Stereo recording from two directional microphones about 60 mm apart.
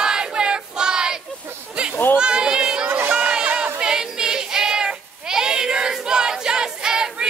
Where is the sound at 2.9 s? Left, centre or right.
Right.